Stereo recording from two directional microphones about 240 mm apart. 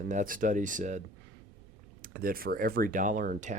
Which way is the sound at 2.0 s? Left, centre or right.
Right.